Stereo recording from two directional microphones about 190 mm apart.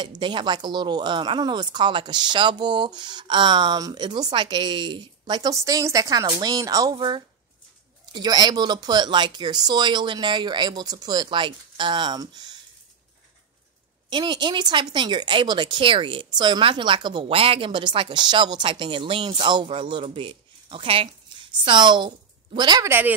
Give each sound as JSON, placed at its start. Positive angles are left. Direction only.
{"t": 0.0, "sound": "speech", "side_deg": -25}
{"t": 14.1, "sound": "speech", "side_deg": -25}